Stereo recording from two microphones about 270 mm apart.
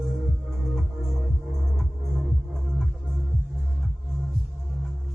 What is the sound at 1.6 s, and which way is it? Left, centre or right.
Music, centre.